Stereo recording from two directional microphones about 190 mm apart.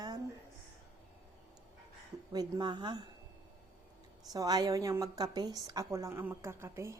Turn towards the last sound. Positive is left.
turn(degrees=-15)  # may be behind; listen again after turning